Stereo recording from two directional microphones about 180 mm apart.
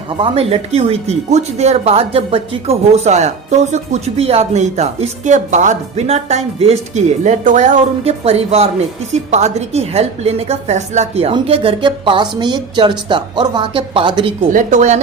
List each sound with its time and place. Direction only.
0.2 s a woman's voice: 35° right (ahead or behind)
14.5 s speech: 45° right (ahead or behind)